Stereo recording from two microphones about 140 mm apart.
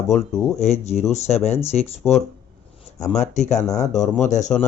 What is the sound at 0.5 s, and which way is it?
Speech, 50° left (ahead or behind).